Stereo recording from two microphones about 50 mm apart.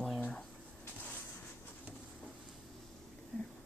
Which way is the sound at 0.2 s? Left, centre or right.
Centre.